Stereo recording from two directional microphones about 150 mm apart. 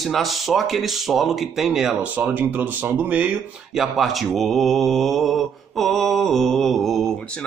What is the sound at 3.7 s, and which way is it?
Speech, centre (ahead or behind).